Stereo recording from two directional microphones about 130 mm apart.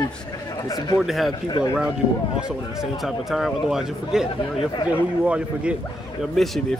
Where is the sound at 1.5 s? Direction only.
30° left (ahead or behind).